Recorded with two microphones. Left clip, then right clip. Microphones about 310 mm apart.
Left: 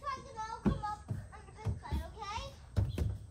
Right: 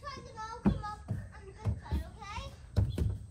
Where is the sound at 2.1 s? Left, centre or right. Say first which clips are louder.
Left 4 dB; left.